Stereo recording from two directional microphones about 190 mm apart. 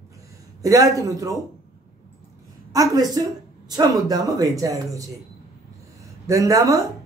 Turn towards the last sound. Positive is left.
turn(degrees=-20)  # may be behind; listen again after turning